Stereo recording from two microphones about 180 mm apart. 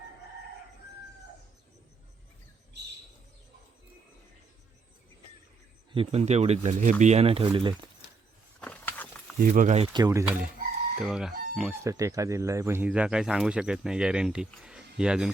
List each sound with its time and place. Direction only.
5.9 s speech: 35° right (ahead or behind)
8.6 s a sound: 10° left (ahead or behind)
9.4 s speech: 45° right (ahead or behind); by 11.7 s centre (ahead or behind)
11.7 s speech: 15° right (ahead or behind)